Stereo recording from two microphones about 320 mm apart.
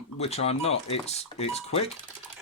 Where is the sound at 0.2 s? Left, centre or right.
Centre.